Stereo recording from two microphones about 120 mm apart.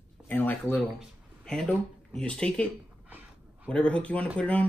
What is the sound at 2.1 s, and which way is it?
Speech, 10° left (ahead or behind).